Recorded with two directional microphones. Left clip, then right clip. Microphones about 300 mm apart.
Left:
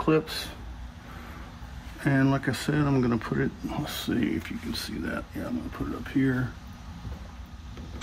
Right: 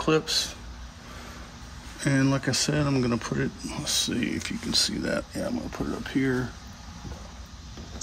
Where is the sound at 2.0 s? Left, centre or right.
Centre.